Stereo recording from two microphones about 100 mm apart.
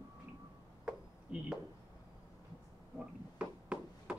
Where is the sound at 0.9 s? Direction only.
10° right (ahead or behind).